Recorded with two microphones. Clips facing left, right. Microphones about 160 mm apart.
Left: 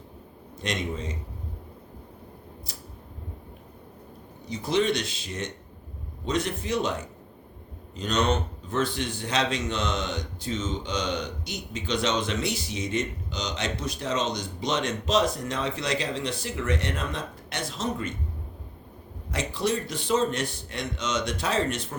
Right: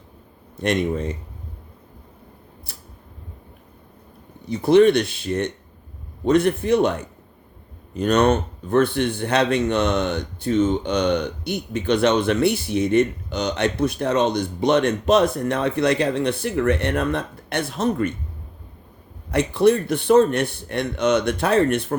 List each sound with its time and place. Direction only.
0.6 s speech: 60° right (ahead or behind)
2.7 s a sound: 60° right (ahead or behind)
4.4 s speech: 60° right (ahead or behind)
19.3 s speech: 60° right (ahead or behind)